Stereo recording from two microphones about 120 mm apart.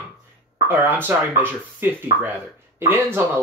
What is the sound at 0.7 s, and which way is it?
Speech, 15° right (ahead or behind).